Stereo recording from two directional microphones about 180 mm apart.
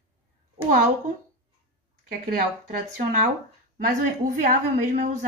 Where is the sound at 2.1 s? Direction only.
55° right (ahead or behind).